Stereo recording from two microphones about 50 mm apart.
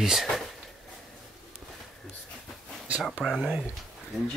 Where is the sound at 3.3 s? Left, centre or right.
Centre.